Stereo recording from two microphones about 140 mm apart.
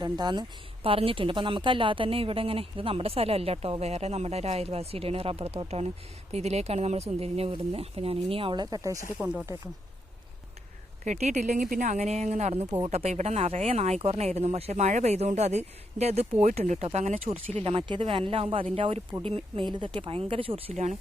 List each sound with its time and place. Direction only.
0.0 s a woman's voice: 30° right (ahead or behind)
9.1 s speech: 10° right (ahead or behind)
11.0 s a woman's voice: 55° right (ahead or behind)
17.6 s speech: 40° right (ahead or behind)